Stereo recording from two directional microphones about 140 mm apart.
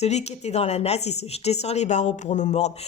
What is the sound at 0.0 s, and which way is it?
A woman's voice, 50° left (ahead or behind).